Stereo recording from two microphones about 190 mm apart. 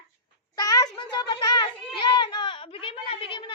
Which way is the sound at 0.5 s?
20° left (ahead or behind).